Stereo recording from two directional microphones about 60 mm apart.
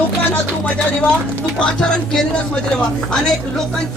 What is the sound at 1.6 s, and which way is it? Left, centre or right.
Speech, centre.